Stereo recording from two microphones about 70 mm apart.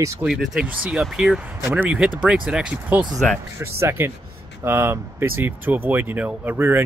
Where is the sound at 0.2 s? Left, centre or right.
Centre.